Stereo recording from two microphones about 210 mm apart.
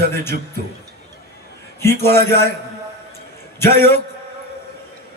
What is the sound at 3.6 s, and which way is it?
Speech, 10° left (ahead or behind).